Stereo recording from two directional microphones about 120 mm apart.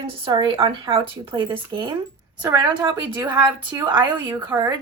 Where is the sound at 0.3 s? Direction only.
45° right (ahead or behind).